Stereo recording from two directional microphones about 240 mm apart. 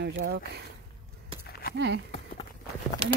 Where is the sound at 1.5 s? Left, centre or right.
Left.